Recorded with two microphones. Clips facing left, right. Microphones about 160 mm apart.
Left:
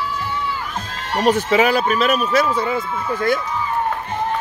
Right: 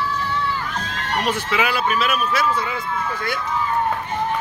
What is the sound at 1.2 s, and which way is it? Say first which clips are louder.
Speech: left 9 dB; 45° left (ahead or behind).